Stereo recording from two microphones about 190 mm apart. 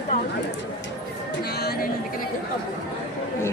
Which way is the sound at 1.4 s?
55° left (ahead or behind).